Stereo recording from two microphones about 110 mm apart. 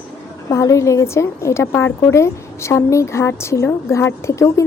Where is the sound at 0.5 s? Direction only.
30° left (ahead or behind).